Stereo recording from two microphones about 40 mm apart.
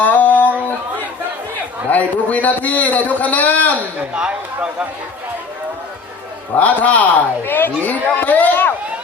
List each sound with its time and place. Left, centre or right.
0.0 s a sound: left
1.9 s a man's voice: left
4.1 s speech: right
6.6 s speech: left
7.4 s speech: left